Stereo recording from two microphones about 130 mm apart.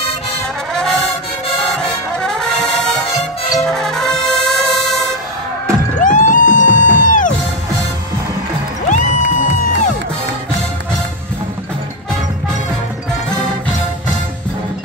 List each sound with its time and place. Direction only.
1.8 s brass instrument: 5° left (ahead or behind)
6.0 s music: 80° left
8.8 s music: 75° left (ahead or behind)